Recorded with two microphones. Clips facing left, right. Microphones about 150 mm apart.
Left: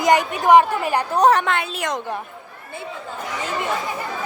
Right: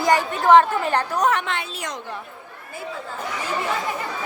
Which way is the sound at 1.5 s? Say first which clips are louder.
Left 6 dB; 55° left (ahead or behind).